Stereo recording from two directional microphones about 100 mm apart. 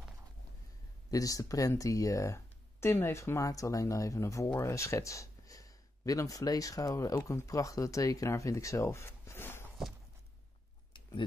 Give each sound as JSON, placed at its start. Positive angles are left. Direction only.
{"t": 1.1, "sound": "speech", "side_deg": 35}